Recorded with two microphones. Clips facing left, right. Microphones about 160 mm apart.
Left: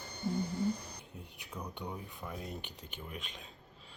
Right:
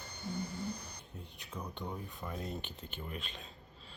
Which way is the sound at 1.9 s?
5° left (ahead or behind).